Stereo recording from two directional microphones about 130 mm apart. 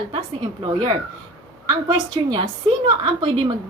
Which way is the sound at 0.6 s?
35° right (ahead or behind).